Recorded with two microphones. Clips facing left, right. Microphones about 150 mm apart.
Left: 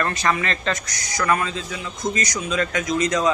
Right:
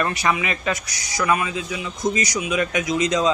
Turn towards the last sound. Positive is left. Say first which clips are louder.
# right 1 dB
turn(degrees=-15)  # may be behind; listen again after turning